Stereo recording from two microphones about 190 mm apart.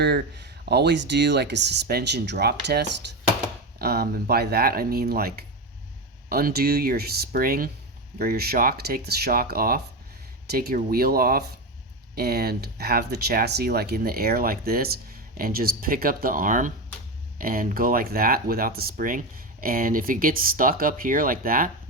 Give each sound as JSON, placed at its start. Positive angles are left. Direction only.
{"t": 0.0, "sound": "speech", "side_deg": -60}